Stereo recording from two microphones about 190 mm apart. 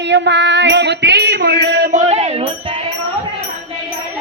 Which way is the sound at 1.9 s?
35° right (ahead or behind).